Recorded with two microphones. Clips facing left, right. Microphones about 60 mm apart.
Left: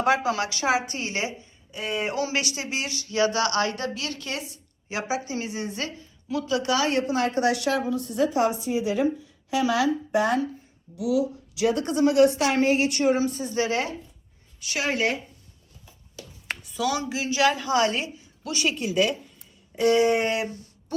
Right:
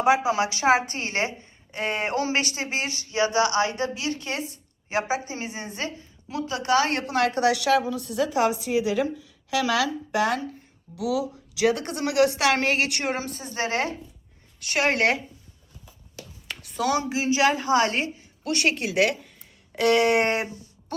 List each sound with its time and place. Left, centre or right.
0.0 s speech: centre; by 7.0 s right
7.1 s a woman's voice: right
13.3 s speech: right
14.6 s a woman's voice: right
16.7 s a woman's voice: right